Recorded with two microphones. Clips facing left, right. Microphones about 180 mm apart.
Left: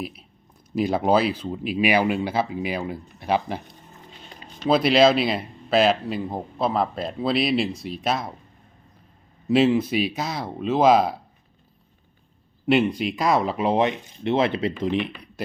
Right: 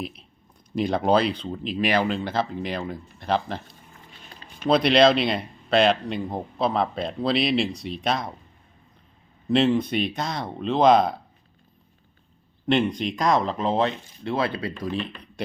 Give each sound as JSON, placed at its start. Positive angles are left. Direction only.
{"t": 0.0, "sound": "speech", "side_deg": 5}
{"t": 4.7, "sound": "speech", "side_deg": 5}
{"t": 9.5, "sound": "speech", "side_deg": 5}
{"t": 12.6, "sound": "speech", "side_deg": 5}